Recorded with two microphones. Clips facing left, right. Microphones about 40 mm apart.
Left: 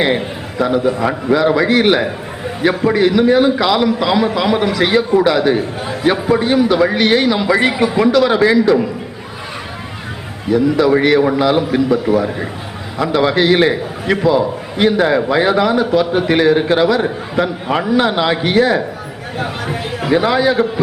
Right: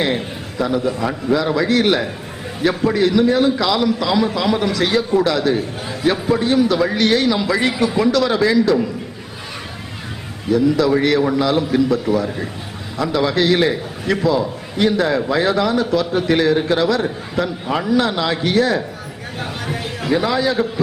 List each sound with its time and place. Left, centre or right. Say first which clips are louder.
0.0 s a man's voice: left 4 dB; centre
10.5 s a man's voice: left 3 dB; centre